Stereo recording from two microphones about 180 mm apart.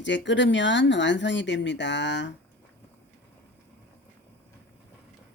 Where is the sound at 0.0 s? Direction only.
90° left.